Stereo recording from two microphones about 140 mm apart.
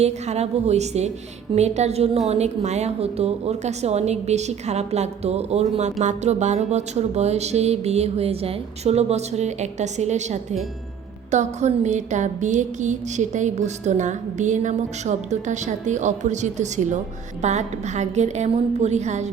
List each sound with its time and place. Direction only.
0.0 s a woman's voice: 50° right (ahead or behind)
11.3 s music: 55° right (ahead or behind)